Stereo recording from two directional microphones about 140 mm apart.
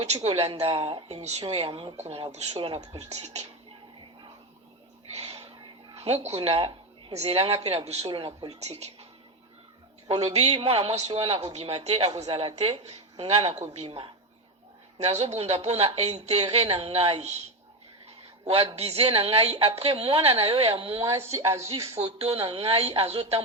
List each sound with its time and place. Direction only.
0.0 s speech: 50° right (ahead or behind)
2.8 s speech: 25° right (ahead or behind)
3.1 s speech: 50° right (ahead or behind)
5.1 s speech: 45° right (ahead or behind)
10.5 s a woman's voice: 40° right (ahead or behind)
14.9 s speech: 50° right (ahead or behind)
18.0 s a sound: 45° right (ahead or behind)
18.8 s a woman's voice: 45° right (ahead or behind)
21.2 s speech: 20° right (ahead or behind)
21.9 s speech: 45° right (ahead or behind)